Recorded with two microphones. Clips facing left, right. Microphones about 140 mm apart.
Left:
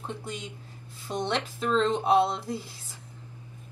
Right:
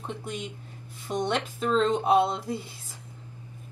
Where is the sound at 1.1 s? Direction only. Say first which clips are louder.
Right 2 dB; 10° right (ahead or behind).